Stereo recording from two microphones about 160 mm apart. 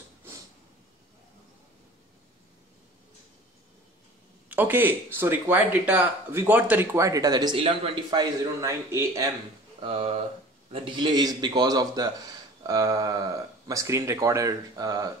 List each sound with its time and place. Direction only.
4.5 s speech: 10° right (ahead or behind)
9.8 s speech: 35° right (ahead or behind)